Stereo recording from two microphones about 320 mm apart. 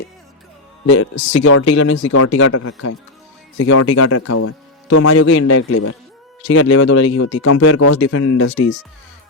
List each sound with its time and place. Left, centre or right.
1.4 s a man's voice: left
7.3 s speech: left